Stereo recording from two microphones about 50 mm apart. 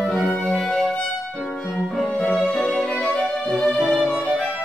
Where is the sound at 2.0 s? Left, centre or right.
Left.